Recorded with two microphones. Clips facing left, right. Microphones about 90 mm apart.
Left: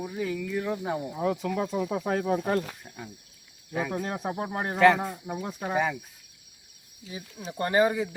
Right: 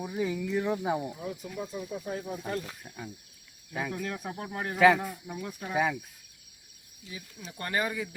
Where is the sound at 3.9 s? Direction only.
35° left (ahead or behind).